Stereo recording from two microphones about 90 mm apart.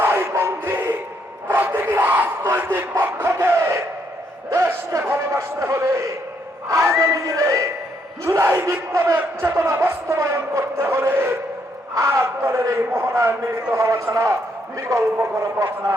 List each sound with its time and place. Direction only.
0.0 s music: 25° right (ahead or behind)
1.5 s a sound: 20° right (ahead or behind)
4.4 s a man's voice: 30° right (ahead or behind)